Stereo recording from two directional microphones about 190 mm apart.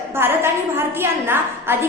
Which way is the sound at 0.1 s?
10° right (ahead or behind).